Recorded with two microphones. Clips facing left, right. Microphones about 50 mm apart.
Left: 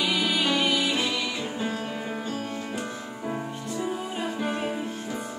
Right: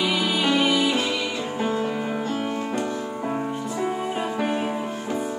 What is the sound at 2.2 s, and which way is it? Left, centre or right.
Music, right.